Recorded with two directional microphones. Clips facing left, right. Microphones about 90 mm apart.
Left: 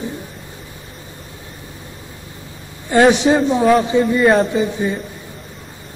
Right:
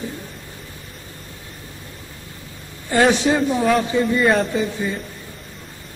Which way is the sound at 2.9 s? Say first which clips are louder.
Left 4 dB; 20° left (ahead or behind).